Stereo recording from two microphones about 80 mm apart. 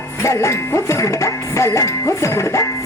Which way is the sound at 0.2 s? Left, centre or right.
Left.